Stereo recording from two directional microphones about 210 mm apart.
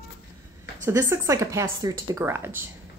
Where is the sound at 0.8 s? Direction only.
15° right (ahead or behind).